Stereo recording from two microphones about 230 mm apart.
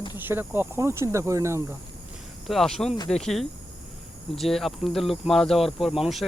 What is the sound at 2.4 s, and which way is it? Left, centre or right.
Speech, centre.